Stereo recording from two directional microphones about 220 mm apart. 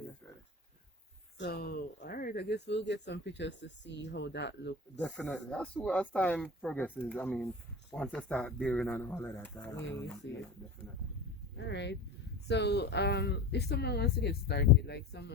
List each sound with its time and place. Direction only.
1.4 s speech: 45° left (ahead or behind)
4.9 s speech: centre (ahead or behind)
11.5 s speech: 55° left (ahead or behind)